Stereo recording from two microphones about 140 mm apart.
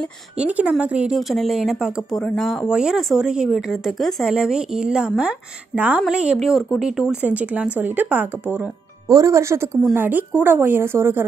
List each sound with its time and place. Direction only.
0.4 s a woman's voice: 10° right (ahead or behind)